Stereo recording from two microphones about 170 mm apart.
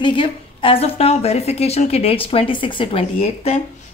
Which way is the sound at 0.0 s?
30° left (ahead or behind).